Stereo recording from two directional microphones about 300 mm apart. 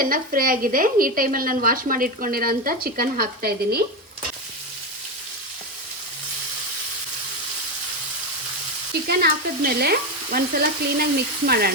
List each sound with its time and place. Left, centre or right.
0.0 s a woman's voice: right
9.0 s a woman's voice: right